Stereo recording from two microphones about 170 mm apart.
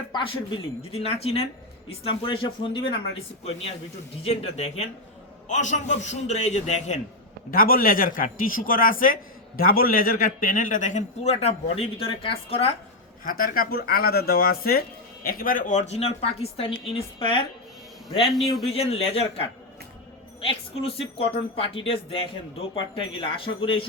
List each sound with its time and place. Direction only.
0.1 s speech: 30° left (ahead or behind)
4.2 s speech: 35° left (ahead or behind)
7.5 s speech: 60° left (ahead or behind); by 12.7 s 35° left (ahead or behind)
13.2 s speech: 60° left (ahead or behind)
15.9 s speech: 35° left (ahead or behind)
18.3 s a man's voice: centre (ahead or behind)
18.7 s speech: 35° left (ahead or behind)
20.4 s speech: 35° left (ahead or behind)